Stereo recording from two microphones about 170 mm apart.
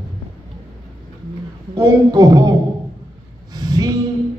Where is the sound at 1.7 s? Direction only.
20° right (ahead or behind).